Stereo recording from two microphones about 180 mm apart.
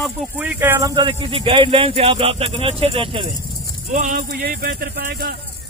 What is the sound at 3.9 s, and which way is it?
Speech, 45° right (ahead or behind).